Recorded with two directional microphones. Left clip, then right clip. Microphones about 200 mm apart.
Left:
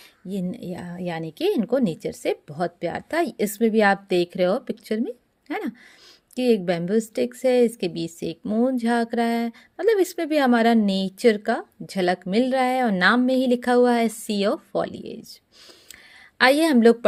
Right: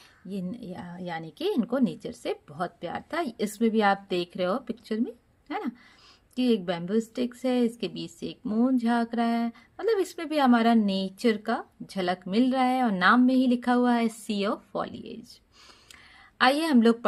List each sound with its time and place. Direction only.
0.3 s a woman's voice: 35° left (ahead or behind)
16.4 s a woman's voice: 30° left (ahead or behind)